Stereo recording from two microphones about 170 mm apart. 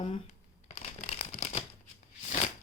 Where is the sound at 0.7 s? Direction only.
40° left (ahead or behind).